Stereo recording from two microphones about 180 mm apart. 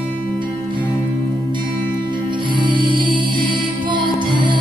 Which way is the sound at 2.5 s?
25° right (ahead or behind).